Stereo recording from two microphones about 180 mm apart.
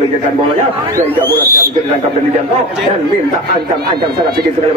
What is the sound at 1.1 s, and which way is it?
Speech, 10° left (ahead or behind).